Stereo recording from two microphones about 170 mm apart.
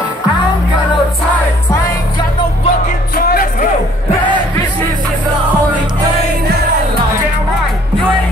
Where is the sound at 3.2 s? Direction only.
60° left (ahead or behind).